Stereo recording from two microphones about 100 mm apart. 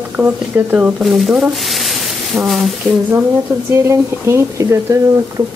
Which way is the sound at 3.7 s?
25° right (ahead or behind).